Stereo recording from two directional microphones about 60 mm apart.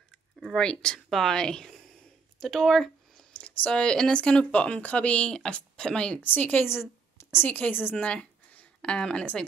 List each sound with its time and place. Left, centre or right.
0.6 s speech: centre
3.3 s speech: centre
6.2 s a woman's voice: left
6.7 s a sound: left
7.4 s a woman's voice: left
7.9 s a sound: centre